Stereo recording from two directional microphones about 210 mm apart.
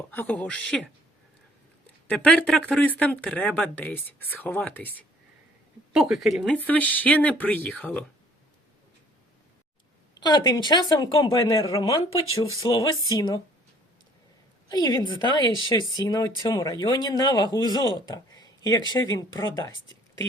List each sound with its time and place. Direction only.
0.1 s speech: 5° left (ahead or behind)
2.0 s speech: 5° left (ahead or behind)
5.9 s speech: centre (ahead or behind)
10.2 s speech: 20° left (ahead or behind)
14.7 s speech: 20° left (ahead or behind)